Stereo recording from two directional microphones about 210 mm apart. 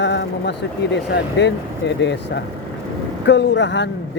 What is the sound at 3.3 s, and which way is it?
Speech, 60° left (ahead or behind).